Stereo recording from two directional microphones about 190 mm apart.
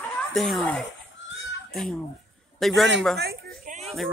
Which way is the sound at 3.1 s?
55° right (ahead or behind).